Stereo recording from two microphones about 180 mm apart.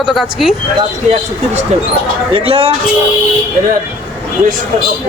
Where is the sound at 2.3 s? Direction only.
30° right (ahead or behind).